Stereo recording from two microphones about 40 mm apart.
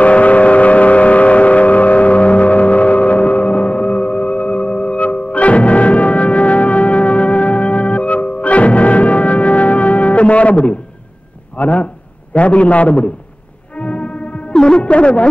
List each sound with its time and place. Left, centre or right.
0.0 s vehicle: left
11.5 s a sound: left
12.4 s a man's voice: left
13.7 s music: left
14.5 s music: centre
14.8 s music: left